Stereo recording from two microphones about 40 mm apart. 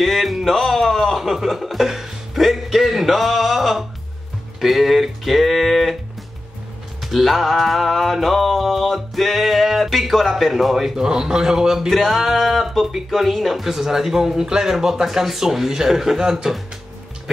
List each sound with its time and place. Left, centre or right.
0.0 s music: centre
4.6 s speech: centre
7.0 s music: centre
11.0 s speech: centre
11.9 s speech: centre